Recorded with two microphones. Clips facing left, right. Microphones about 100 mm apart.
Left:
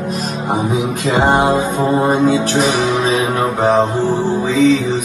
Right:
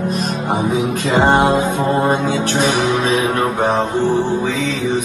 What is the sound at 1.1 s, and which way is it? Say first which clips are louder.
Music: even; 10° left (ahead or behind).